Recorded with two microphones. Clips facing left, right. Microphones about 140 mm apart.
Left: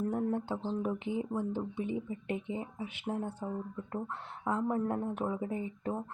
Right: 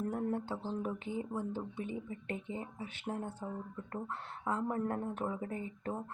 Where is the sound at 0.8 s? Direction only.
15° left (ahead or behind).